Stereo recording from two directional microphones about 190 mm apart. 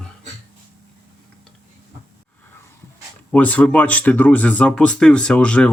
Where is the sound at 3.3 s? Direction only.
10° left (ahead or behind).